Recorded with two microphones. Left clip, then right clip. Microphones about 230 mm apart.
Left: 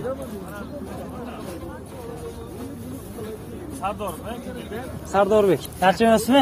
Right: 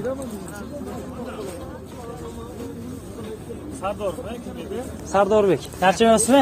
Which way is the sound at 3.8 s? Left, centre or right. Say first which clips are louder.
Right 2 dB; left.